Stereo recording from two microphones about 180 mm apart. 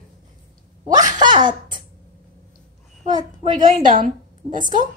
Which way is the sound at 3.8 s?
50° right (ahead or behind).